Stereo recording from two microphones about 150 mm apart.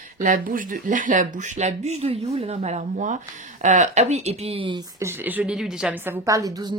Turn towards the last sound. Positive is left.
turn(degrees=-25)  # may be behind; listen again after turning